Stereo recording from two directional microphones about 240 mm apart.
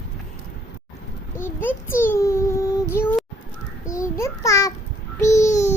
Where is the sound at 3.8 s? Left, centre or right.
Centre.